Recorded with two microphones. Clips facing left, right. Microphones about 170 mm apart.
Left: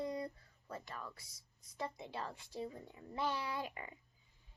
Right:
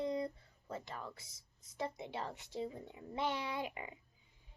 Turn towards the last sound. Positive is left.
turn(degrees=-20)  # may be behind; listen again after turning